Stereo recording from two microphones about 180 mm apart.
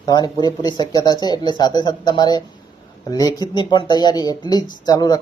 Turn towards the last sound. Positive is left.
turn(degrees=20)  # may be behind; listen again after turning